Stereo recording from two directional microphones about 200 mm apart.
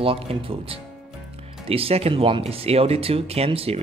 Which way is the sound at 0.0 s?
25° right (ahead or behind).